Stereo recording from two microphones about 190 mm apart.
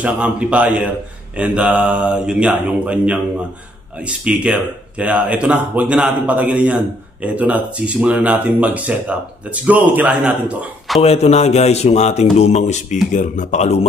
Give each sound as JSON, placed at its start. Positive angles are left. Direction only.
{"t": 0.0, "sound": "a man's voice", "side_deg": -5}
{"t": 11.0, "sound": "a man's voice", "side_deg": 35}